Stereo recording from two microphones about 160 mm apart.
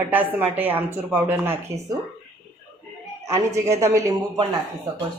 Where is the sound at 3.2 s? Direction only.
15° right (ahead or behind).